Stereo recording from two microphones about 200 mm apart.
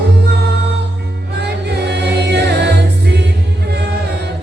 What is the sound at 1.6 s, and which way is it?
Music, 55° right (ahead or behind).